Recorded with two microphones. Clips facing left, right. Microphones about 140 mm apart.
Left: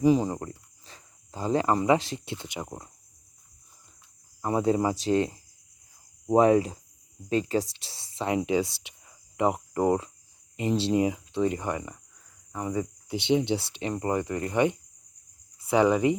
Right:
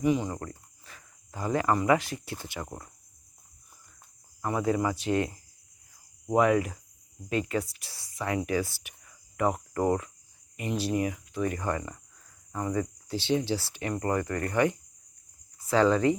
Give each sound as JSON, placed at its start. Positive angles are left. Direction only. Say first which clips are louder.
{"t": 0.0, "sound": "speech", "louder": "left 4 dB", "side_deg": 30}
{"t": 4.4, "sound": "speech", "louder": "left 3 dB", "side_deg": 25}
{"t": 8.8, "sound": "cricket", "louder": "left 1 dB", "side_deg": 25}
{"t": 10.6, "sound": "speech", "louder": "left 4 dB", "side_deg": 25}